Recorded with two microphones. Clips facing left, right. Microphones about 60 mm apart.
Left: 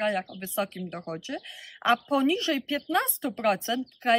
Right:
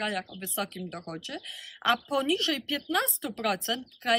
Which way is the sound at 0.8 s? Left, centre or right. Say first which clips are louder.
Left 3 dB; centre.